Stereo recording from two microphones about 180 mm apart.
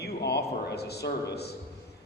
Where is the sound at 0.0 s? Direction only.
65° left (ahead or behind).